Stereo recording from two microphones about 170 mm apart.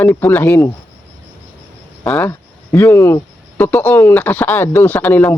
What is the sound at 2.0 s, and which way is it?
Speech, 5° left (ahead or behind).